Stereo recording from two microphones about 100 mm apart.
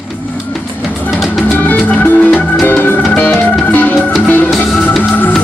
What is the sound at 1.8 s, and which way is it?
Music, 15° left (ahead or behind).